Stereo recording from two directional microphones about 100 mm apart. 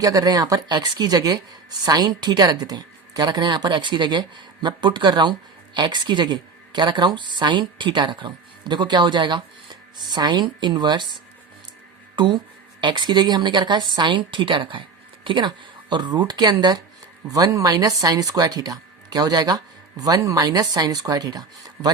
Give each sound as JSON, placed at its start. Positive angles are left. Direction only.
{"t": 0.0, "sound": "a woman's voice", "side_deg": -40}
{"t": 12.1, "sound": "a woman's voice", "side_deg": -50}